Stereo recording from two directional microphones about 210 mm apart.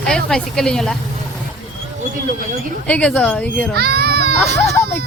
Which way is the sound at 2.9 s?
5° left (ahead or behind).